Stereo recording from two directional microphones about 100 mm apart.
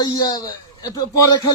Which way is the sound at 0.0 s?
40° left (ahead or behind).